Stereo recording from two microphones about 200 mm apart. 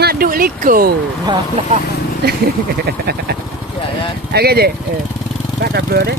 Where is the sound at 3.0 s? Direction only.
50° right (ahead or behind).